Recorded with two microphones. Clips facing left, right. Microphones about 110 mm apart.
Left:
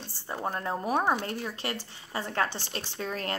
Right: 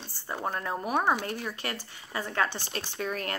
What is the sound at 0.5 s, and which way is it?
A woman's voice, 35° left (ahead or behind).